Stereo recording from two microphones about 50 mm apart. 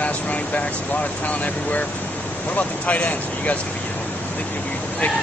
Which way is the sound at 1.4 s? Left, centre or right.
Left.